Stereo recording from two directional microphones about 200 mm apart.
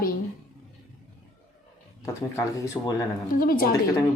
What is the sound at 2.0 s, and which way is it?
Speech, 15° left (ahead or behind).